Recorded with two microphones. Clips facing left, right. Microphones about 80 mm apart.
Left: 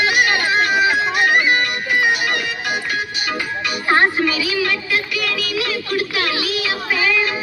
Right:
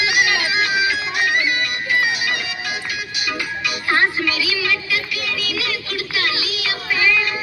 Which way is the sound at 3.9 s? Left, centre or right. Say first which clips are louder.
Left 3 dB; left.